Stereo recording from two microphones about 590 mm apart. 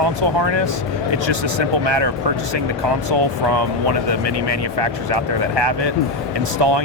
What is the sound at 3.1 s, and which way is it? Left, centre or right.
Speech, right.